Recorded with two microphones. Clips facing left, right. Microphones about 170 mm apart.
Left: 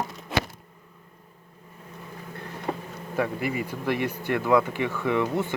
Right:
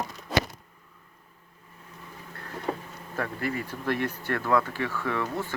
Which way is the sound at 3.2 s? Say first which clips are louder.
Left 4 dB; 10° left (ahead or behind).